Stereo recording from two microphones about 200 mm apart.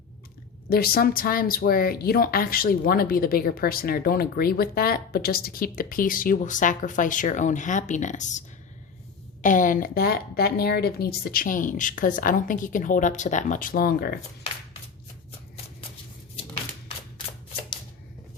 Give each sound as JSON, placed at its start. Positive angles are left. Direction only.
{"t": 0.7, "sound": "speech", "side_deg": 50}